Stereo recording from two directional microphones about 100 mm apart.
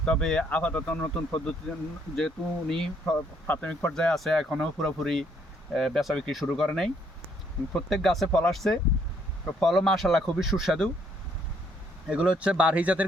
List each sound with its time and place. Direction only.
0.0 s speech: 5° left (ahead or behind)
3.2 s speech: 20° left (ahead or behind)
3.9 s speech: 5° left (ahead or behind)
12.0 s speech: 10° right (ahead or behind)